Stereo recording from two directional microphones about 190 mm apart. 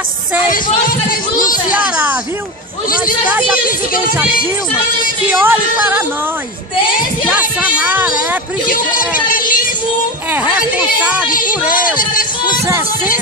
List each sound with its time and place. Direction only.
0.5 s speech: 50° left (ahead or behind)
1.7 s speech: 10° right (ahead or behind)
3.3 s speech: 5° right (ahead or behind)
5.3 s speech: 10° right (ahead or behind)
7.2 s speech: 5° right (ahead or behind)
8.6 s speech: 45° left (ahead or behind)
9.3 s child singing: 45° left (ahead or behind)
10.3 s speech: 5° right (ahead or behind)
12.6 s speech: 15° right (ahead or behind)